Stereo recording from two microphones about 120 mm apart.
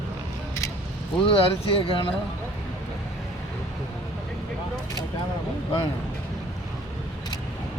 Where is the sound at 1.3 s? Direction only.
50° left (ahead or behind).